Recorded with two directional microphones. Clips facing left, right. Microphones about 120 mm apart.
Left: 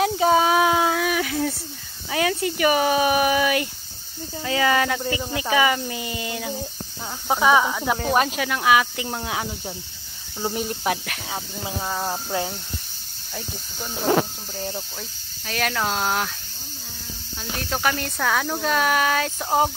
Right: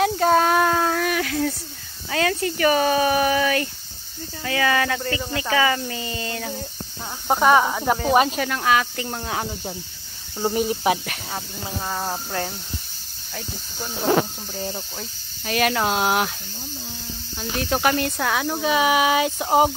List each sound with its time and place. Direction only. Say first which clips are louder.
0.0 s a sound: even; 5° left (ahead or behind)
2.0 s speech: even; 10° left (ahead or behind)
7.2 s speech: right 2 dB; centre (ahead or behind)
7.6 s speech: right 1 dB; 20° right (ahead or behind)
7.9 s speech: right 4 dB; centre (ahead or behind)
10.5 s speech: right 5 dB; 5° right (ahead or behind)
17.4 s speech: right 4 dB; 5° right (ahead or behind)